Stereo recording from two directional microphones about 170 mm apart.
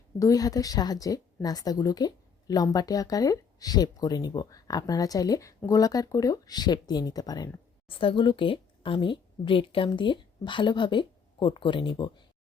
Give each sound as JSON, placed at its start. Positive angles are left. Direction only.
{"t": 0.2, "sound": "a woman's voice", "side_deg": 20}